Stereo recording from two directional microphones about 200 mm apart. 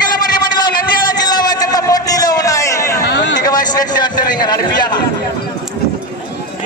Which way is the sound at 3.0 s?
60° left (ahead or behind).